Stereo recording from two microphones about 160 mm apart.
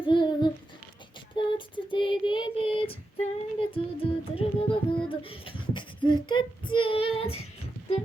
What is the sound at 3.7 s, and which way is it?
Music, 35° left (ahead or behind).